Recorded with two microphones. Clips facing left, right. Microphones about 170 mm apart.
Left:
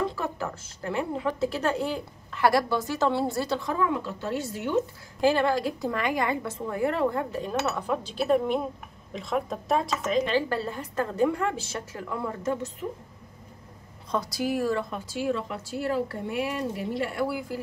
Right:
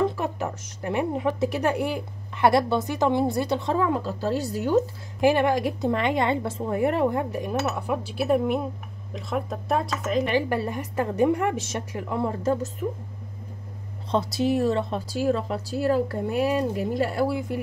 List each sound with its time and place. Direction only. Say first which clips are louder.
0.1 s speech: right 3 dB; 20° right (ahead or behind); by 4.8 s 40° right (ahead or behind)
5.2 s a woman's voice: right 3 dB; 15° right (ahead or behind); by 10.2 s centre (ahead or behind)
10.2 s a woman's voice: right 2 dB; 15° right (ahead or behind)
14.1 s speech: right 5 dB; 25° right (ahead or behind)